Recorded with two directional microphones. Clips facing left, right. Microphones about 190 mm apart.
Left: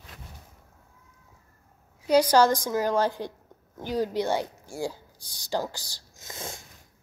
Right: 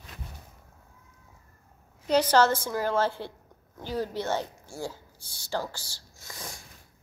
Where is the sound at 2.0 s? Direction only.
10° left (ahead or behind).